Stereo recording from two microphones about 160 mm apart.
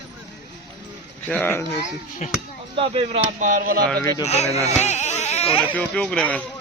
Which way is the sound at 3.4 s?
60° right (ahead or behind).